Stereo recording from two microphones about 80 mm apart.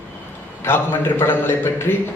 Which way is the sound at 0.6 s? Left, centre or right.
Left.